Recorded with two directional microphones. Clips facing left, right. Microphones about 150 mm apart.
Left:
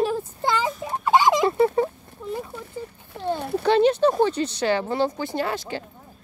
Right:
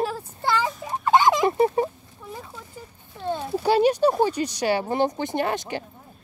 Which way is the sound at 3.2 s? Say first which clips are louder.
Left 2 dB; 60° left (ahead or behind).